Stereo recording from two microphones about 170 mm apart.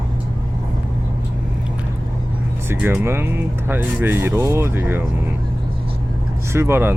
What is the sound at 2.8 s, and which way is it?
Speech, 15° right (ahead or behind).